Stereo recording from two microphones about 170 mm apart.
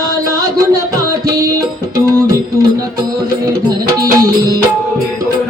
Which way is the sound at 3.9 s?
20° right (ahead or behind).